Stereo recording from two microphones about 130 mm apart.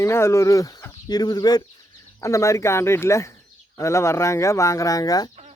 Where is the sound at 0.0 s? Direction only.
20° left (ahead or behind).